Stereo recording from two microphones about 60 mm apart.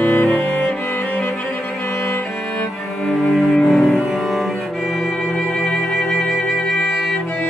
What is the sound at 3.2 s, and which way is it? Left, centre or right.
Cello, centre.